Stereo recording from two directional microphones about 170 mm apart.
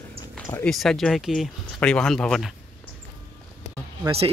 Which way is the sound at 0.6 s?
Centre (ahead or behind).